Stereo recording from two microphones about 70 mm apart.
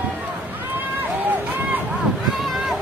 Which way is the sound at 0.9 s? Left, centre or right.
Right.